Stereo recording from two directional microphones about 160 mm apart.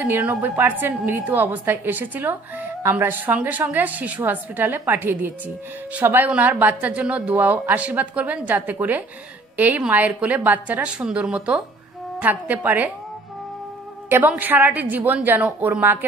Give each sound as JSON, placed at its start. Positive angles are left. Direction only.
{"t": 0.0, "sound": "a woman's voice", "side_deg": -10}
{"t": 14.0, "sound": "a woman's voice", "side_deg": -10}